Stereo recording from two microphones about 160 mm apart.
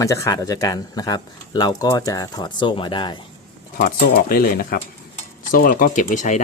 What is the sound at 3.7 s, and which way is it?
Speech, 65° left (ahead or behind).